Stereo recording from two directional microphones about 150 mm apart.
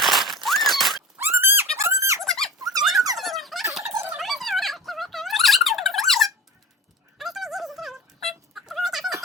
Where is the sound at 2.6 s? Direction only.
25° right (ahead or behind).